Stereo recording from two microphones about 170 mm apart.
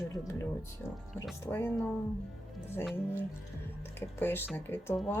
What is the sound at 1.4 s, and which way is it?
Speech, 15° left (ahead or behind).